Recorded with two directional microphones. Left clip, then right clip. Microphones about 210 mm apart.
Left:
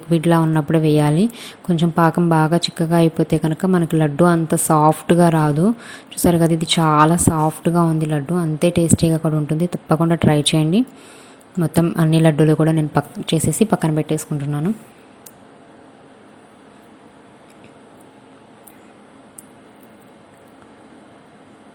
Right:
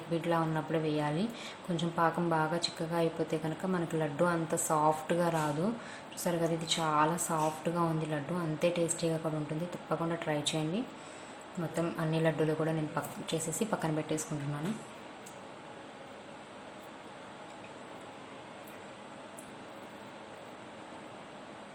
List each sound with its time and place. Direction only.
0.1 s a woman's voice: 40° left (ahead or behind)